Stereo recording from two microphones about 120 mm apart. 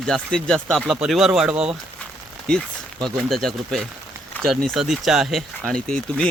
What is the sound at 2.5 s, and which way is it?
Speech, 5° left (ahead or behind).